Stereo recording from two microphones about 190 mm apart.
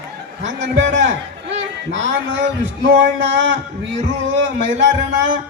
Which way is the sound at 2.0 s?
70° right (ahead or behind).